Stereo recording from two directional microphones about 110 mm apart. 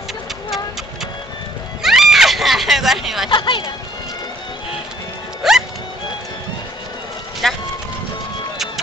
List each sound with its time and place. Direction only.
1.8 s a sound: 5° right (ahead or behind)
3.3 s speech: 45° left (ahead or behind)
5.4 s music: 5° right (ahead or behind)
7.4 s music: centre (ahead or behind)